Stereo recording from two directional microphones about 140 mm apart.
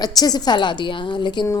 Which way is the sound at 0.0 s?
30° left (ahead or behind).